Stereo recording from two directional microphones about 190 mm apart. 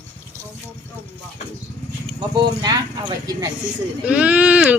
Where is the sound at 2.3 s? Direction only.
20° right (ahead or behind).